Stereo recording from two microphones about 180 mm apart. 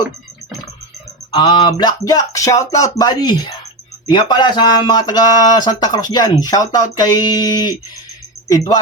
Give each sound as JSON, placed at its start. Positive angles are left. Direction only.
{"t": 1.3, "sound": "speech", "side_deg": 25}